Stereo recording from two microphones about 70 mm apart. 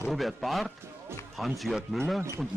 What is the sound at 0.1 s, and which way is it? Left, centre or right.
Speech, centre.